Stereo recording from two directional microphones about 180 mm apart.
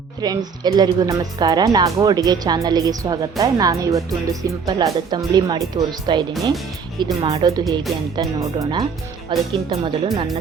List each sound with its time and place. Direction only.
0.2 s speech: 20° right (ahead or behind)